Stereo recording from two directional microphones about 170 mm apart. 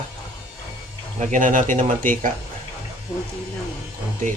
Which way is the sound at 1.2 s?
50° right (ahead or behind).